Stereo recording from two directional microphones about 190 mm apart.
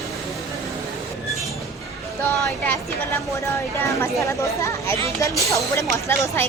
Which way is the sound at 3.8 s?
15° left (ahead or behind).